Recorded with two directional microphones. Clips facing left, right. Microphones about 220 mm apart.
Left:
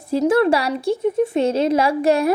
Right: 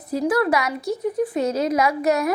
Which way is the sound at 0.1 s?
25° left (ahead or behind).